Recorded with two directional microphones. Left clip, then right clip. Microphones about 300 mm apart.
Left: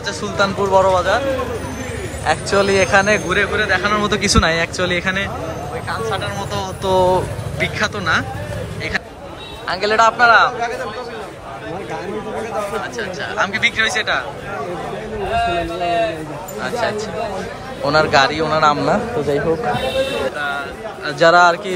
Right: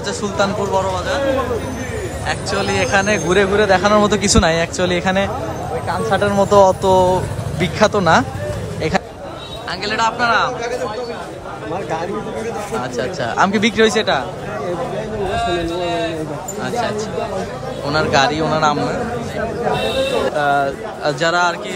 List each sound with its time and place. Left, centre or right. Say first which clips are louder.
0.2 s speech: left 1 dB; centre
2.2 s speech: left 5 dB; centre
5.9 s speech: right 6 dB; right
9.7 s speech: left 4 dB; centre
12.9 s speech: right 3 dB; centre
16.6 s speech: left 1 dB; centre
20.3 s speech: right 7 dB; centre
21.2 s speech: left 7 dB; centre